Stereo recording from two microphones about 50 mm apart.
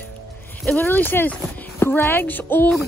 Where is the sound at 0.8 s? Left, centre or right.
Left.